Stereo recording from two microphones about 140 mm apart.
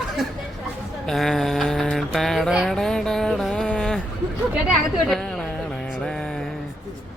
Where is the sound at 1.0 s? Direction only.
Centre (ahead or behind).